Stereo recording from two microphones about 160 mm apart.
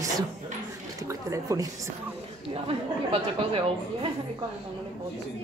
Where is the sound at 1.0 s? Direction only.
20° right (ahead or behind).